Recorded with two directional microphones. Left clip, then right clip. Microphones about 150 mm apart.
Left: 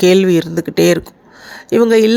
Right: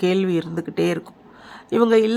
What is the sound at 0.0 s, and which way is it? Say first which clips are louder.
Speech: left 10 dB; 30° left (ahead or behind).